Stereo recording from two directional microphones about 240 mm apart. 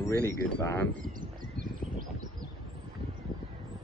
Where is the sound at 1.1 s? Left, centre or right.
Right.